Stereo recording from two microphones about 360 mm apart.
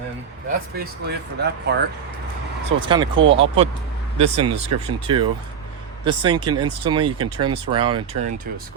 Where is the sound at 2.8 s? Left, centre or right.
Centre.